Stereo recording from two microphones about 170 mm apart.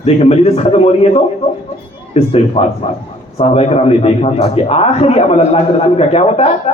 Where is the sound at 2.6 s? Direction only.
35° left (ahead or behind).